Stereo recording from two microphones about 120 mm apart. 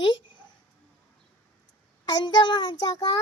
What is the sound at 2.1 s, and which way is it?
A child's voice, 35° left (ahead or behind).